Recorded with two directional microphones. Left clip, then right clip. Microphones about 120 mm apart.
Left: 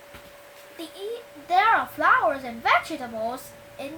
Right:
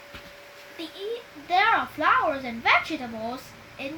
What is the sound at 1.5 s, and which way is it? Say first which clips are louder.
A woman's voice: left 2 dB; 25° left (ahead or behind).